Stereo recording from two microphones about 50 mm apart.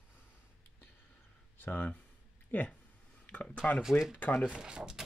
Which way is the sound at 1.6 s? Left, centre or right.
Left.